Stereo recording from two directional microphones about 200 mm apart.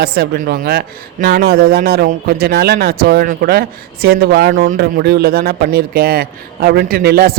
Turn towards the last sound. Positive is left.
turn(degrees=-50)  # may be behind; listen again after turning